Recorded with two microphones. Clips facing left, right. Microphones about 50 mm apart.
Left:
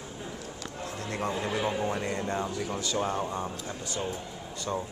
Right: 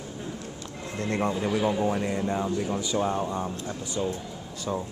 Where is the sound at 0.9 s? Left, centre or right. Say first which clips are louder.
Right 9 dB; right.